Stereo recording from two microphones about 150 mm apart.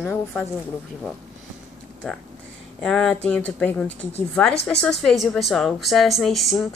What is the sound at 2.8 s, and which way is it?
A woman's voice, 5° left (ahead or behind).